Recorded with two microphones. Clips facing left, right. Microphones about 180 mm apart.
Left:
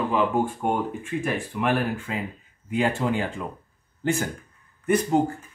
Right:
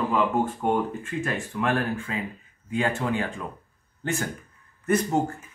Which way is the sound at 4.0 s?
35° left (ahead or behind).